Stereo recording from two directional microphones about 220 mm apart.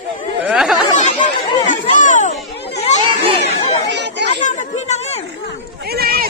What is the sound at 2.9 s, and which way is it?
Children playing, 30° left (ahead or behind).